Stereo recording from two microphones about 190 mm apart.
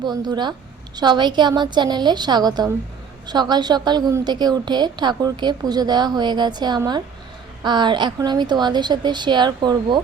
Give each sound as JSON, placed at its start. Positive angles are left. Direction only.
{"t": 0.0, "sound": "a woman's voice", "side_deg": -20}